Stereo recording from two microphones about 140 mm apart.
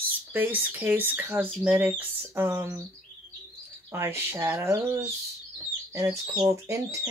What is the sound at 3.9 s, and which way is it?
Speech, 20° right (ahead or behind).